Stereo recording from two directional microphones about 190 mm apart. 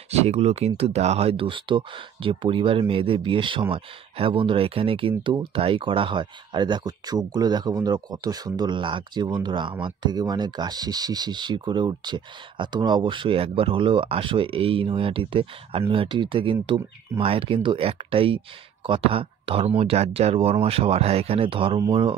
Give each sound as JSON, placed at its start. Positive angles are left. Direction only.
{"t": 0.1, "sound": "speech", "side_deg": -35}